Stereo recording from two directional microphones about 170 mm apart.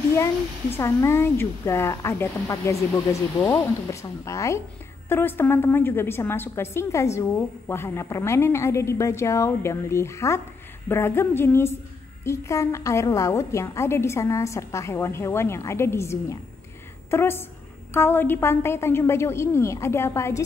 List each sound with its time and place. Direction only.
0.1 s a woman's voice: 15° left (ahead or behind)